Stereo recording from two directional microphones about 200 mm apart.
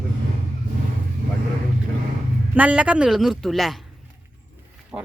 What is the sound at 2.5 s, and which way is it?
Speech, 5° right (ahead or behind).